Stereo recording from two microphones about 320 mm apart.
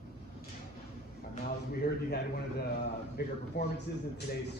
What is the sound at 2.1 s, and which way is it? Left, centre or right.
A man's voice, left.